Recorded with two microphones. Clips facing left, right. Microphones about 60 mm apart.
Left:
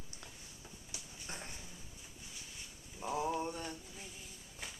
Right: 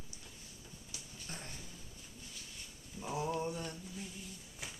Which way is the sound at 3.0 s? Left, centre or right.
Centre.